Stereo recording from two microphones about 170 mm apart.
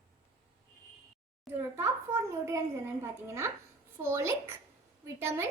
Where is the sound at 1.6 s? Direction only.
15° right (ahead or behind).